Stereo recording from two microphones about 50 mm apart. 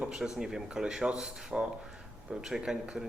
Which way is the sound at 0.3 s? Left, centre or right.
Centre.